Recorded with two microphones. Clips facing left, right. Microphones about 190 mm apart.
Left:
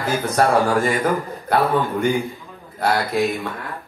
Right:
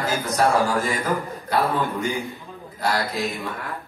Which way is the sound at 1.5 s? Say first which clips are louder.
Left 4 dB; 60° left (ahead or behind).